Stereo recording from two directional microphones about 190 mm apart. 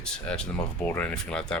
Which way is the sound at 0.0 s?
5° left (ahead or behind).